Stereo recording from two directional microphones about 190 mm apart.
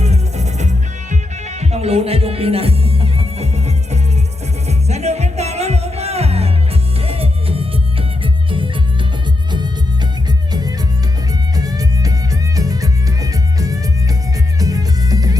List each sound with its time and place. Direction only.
0.0 s music: 35° right (ahead or behind)
10.5 s music: 20° right (ahead or behind)